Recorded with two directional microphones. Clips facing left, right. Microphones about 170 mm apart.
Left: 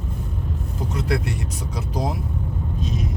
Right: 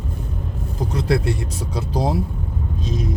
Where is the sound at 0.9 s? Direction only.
30° right (ahead or behind).